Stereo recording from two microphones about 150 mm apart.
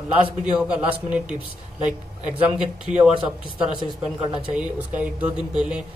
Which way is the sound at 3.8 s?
35° right (ahead or behind).